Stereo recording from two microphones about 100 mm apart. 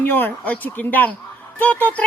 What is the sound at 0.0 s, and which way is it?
A woman's voice, 20° left (ahead or behind).